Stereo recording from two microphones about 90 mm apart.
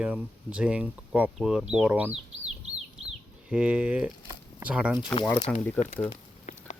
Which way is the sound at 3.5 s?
15° right (ahead or behind).